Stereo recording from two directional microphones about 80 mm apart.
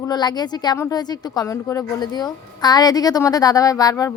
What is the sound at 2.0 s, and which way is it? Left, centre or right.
A woman's voice, left.